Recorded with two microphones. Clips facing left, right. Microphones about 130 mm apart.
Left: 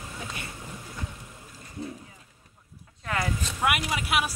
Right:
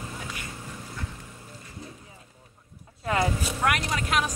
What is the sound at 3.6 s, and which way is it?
Vehicle, 10° left (ahead or behind).